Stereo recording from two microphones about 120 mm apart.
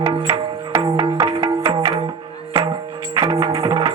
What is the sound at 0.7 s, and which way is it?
Music, 30° right (ahead or behind).